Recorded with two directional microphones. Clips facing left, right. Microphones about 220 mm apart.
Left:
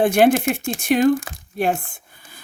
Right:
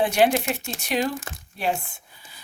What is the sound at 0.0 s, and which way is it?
Speech, 50° left (ahead or behind).